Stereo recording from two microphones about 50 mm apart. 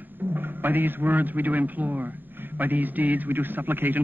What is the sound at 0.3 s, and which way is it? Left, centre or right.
A man's voice, right.